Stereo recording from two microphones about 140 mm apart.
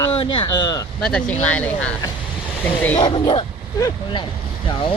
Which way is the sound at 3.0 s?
35° left (ahead or behind).